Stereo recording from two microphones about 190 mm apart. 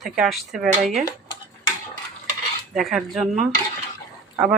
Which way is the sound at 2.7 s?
Centre (ahead or behind).